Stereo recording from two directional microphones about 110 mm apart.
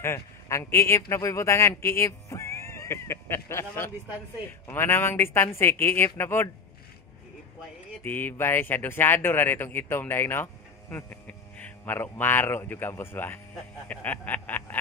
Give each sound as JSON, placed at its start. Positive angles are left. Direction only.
{"t": 0.0, "sound": "speech", "side_deg": 25}
{"t": 8.0, "sound": "speech", "side_deg": 15}
{"t": 13.8, "sound": "a sound", "side_deg": 15}